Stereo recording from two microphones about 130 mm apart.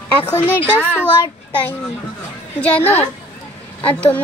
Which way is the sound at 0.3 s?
15° left (ahead or behind).